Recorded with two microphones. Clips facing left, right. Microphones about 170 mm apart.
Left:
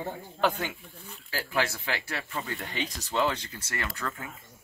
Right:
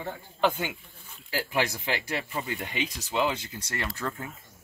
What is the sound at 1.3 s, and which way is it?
Speech, 15° right (ahead or behind).